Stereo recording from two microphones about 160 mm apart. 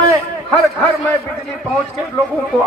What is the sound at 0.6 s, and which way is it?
Speech, 10° left (ahead or behind).